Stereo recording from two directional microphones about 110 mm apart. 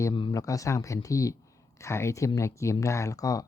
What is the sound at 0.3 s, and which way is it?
Speech, 30° left (ahead or behind).